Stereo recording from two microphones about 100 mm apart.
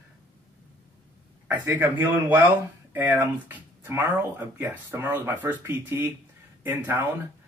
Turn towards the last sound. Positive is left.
turn(degrees=-20)  # may be behind; listen again after turning